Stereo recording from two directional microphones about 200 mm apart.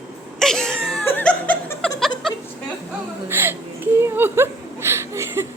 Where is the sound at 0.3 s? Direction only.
Centre (ahead or behind).